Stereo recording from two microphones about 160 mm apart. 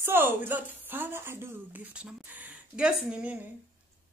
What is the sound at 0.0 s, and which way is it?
A woman's voice, 15° right (ahead or behind).